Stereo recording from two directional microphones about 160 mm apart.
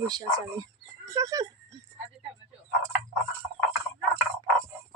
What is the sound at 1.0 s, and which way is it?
Music, 20° right (ahead or behind).